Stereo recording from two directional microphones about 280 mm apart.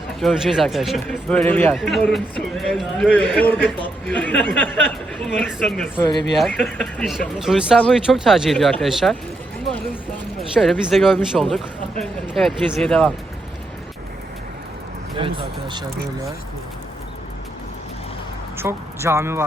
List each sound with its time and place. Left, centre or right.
0.2 s a man's voice: centre
9.6 s a sound: centre
10.5 s a man's voice: centre
15.2 s speech: centre
18.5 s speech: centre